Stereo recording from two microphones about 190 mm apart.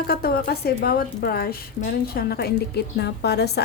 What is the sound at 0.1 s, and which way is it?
A woman's voice, 55° left (ahead or behind).